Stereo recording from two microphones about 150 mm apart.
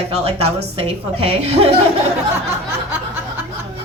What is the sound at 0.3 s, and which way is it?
A woman's voice, 40° right (ahead or behind).